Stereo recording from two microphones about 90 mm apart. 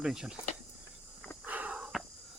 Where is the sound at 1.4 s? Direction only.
20° right (ahead or behind).